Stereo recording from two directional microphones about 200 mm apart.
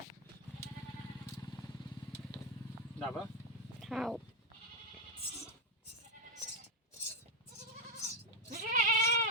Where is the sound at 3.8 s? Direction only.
Centre (ahead or behind).